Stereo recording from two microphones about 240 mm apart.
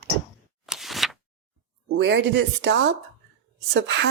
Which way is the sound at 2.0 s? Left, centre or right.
Right.